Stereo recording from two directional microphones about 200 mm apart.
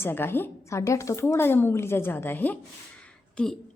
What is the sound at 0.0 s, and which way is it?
A woman's voice, 10° left (ahead or behind).